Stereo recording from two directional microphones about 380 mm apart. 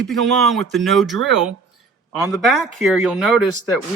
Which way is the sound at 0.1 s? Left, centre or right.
Centre.